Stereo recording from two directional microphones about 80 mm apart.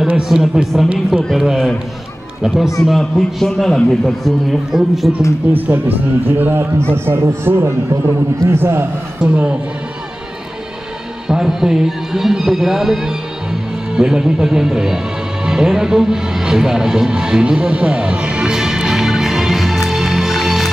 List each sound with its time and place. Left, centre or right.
0.2 s a man's voice: centre
5.4 s a man's voice: centre
9.2 s a man's voice: centre
11.2 s a man's voice: centre
15.4 s music: centre